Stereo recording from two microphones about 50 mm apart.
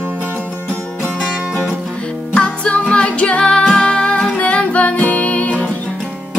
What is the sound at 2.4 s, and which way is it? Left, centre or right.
Music, left.